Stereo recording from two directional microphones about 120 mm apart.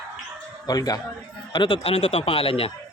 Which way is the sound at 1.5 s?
45° left (ahead or behind).